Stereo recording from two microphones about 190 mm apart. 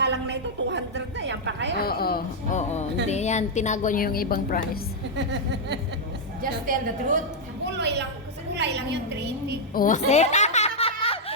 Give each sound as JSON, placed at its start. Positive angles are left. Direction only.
{"t": 0.0, "sound": "a sound", "side_deg": -60}
{"t": 1.8, "sound": "a woman's voice", "side_deg": 55}
{"t": 3.1, "sound": "a woman's voice", "side_deg": 35}
{"t": 5.1, "sound": "speech", "side_deg": -65}
{"t": 6.4, "sound": "a woman's voice", "side_deg": -45}
{"t": 7.8, "sound": "a woman's voice", "side_deg": -65}
{"t": 9.7, "sound": "a woman's voice", "side_deg": 45}
{"t": 10.1, "sound": "a sound", "side_deg": 35}